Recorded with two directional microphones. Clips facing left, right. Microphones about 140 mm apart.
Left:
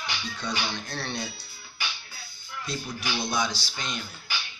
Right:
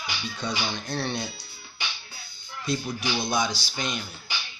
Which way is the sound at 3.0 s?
15° right (ahead or behind).